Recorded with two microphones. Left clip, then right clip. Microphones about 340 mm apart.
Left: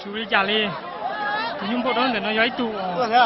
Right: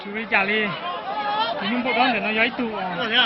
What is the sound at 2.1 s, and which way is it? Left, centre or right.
Speech, centre.